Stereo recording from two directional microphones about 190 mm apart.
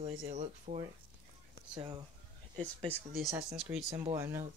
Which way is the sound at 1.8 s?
20° right (ahead or behind).